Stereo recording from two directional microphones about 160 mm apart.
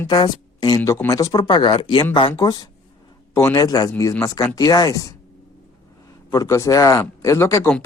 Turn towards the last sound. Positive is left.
turn(degrees=15)  # may be behind; listen again after turning